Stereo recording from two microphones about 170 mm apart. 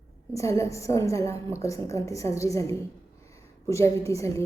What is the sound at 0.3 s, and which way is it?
A woman's voice, 15° left (ahead or behind).